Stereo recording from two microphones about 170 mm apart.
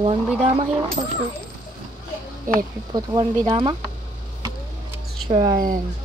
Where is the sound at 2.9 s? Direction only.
25° right (ahead or behind).